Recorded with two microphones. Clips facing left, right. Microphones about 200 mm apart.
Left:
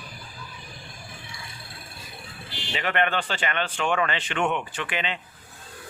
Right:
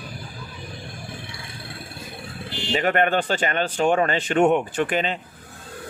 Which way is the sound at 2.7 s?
45° right (ahead or behind).